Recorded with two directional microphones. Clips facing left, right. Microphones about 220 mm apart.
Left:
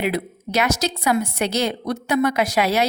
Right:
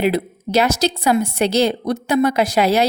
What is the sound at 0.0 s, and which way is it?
A woman's voice, 30° right (ahead or behind).